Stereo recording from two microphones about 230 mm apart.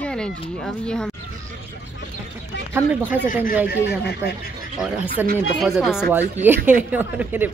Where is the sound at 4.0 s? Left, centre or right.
Left.